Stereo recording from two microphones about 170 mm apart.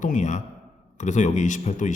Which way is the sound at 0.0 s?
45° left (ahead or behind).